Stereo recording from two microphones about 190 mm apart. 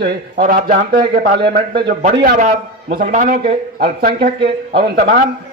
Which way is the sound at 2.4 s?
40° right (ahead or behind).